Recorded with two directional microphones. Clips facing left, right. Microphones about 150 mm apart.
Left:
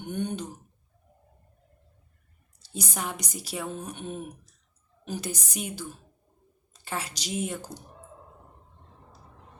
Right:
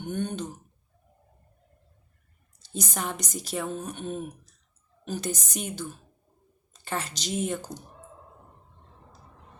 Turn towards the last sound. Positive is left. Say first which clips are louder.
# right 2 dB
turn(degrees=5)  # may be behind; listen again after turning